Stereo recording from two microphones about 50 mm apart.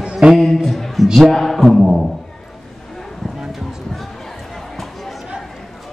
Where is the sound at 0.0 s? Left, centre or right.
Centre.